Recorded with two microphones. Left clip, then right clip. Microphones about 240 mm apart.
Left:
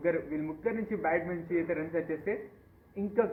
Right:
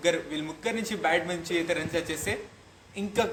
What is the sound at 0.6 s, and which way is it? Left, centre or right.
A man's voice, right.